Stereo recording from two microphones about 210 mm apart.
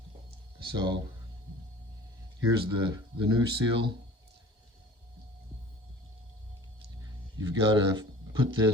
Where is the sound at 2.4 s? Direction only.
20° right (ahead or behind).